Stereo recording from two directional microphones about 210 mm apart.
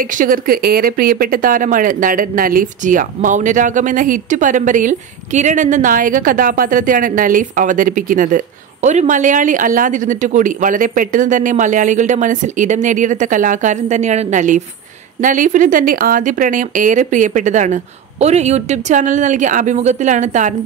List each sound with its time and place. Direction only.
0.0 s speech: 40° right (ahead or behind)